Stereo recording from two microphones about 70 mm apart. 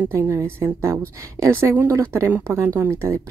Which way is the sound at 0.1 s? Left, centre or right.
Right.